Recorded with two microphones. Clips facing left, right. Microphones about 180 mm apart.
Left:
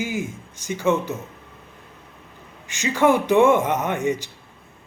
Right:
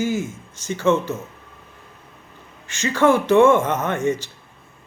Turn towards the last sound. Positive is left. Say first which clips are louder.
# right 1 dB
turn(degrees=15)  # may be behind; listen again after turning